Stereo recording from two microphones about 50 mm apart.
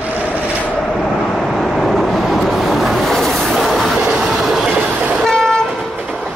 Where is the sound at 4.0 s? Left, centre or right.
Centre.